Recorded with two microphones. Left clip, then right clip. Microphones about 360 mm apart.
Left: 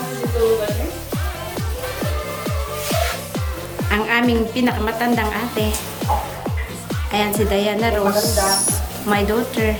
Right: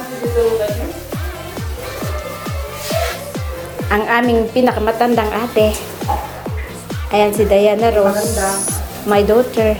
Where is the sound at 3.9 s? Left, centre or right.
Centre.